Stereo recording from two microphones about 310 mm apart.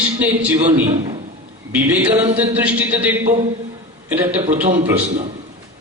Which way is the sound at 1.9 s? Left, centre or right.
Centre.